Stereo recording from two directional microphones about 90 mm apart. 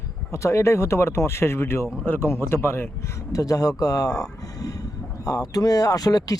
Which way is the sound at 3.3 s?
40° left (ahead or behind).